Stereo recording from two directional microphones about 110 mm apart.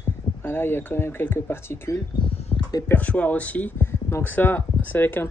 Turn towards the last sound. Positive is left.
turn(degrees=20)  # may be behind; listen again after turning